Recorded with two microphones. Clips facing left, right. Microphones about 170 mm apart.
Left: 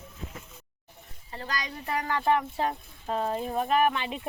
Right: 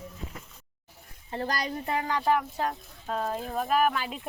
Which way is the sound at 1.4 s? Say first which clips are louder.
Right 4 dB; 40° right (ahead or behind).